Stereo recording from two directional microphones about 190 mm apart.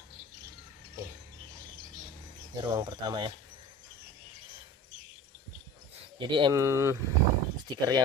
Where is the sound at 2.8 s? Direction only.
25° right (ahead or behind).